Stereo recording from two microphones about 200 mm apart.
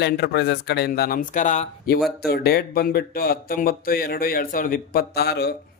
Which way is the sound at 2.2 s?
50° left (ahead or behind).